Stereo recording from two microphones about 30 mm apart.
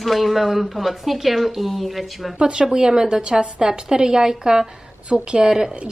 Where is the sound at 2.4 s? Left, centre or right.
Right.